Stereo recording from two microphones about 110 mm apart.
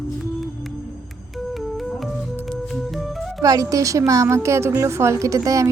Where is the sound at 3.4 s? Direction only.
30° right (ahead or behind).